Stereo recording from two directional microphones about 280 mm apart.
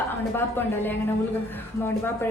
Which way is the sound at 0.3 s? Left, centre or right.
Centre.